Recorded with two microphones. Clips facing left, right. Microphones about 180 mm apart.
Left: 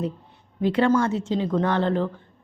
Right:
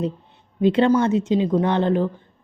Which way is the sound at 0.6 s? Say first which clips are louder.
Right 3 dB; 20° right (ahead or behind).